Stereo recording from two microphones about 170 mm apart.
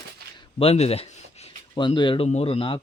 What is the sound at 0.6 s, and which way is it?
Speech, 35° left (ahead or behind).